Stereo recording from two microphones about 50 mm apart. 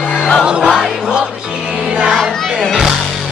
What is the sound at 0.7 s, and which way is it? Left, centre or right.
Music, centre.